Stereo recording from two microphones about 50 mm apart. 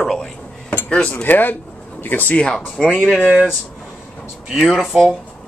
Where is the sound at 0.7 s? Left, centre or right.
Left.